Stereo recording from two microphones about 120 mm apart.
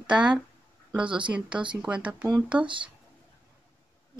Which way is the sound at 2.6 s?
45° right (ahead or behind).